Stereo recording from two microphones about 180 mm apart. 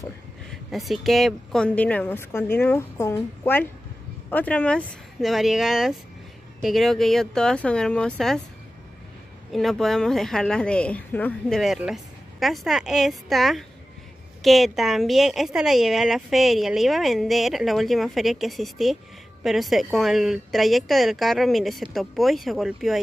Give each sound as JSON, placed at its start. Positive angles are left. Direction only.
{"t": 0.5, "sound": "a woman's voice", "side_deg": 0}
{"t": 9.5, "sound": "a woman's voice", "side_deg": 0}